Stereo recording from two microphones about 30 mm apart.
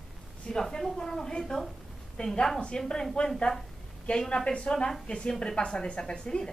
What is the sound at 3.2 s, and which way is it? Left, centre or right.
Speech, left.